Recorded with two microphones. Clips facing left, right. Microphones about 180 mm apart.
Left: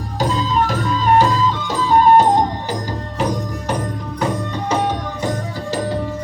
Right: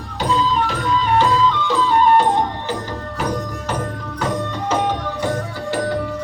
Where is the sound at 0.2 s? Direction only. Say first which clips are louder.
Even; 45° left (ahead or behind).